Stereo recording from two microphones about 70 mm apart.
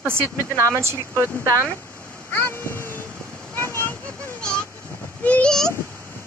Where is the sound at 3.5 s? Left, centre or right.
Left.